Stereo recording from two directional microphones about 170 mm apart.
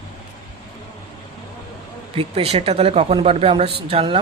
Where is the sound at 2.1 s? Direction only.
35° right (ahead or behind).